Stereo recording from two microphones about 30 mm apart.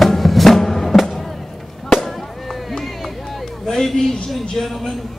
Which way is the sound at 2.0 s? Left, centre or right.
Centre.